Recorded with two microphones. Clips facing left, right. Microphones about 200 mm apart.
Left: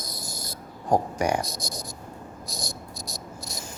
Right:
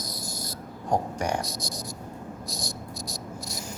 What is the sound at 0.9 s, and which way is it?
Speech, 10° left (ahead or behind).